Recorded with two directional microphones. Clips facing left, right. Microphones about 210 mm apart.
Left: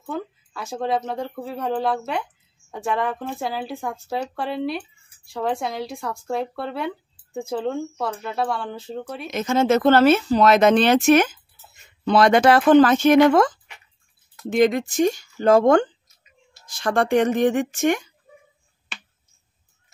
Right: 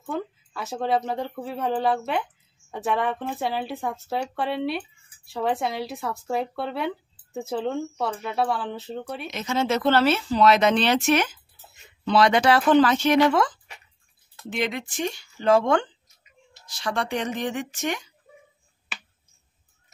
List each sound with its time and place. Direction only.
0.0 s speech: centre (ahead or behind)
9.3 s speech: 50° left (ahead or behind)